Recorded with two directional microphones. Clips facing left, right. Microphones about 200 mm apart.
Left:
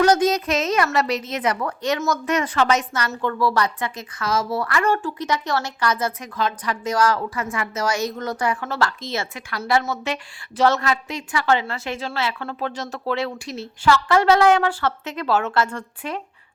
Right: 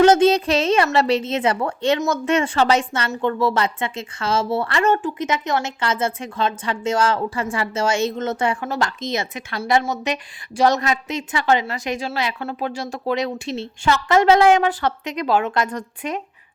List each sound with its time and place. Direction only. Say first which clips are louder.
0.0 s a woman's voice: right 4 dB; 25° right (ahead or behind)